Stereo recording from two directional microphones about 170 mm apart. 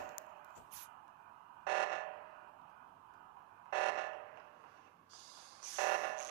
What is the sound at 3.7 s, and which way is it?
Buzzer, 70° right (ahead or behind).